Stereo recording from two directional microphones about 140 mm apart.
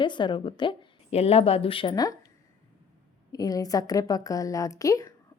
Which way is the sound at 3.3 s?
25° left (ahead or behind).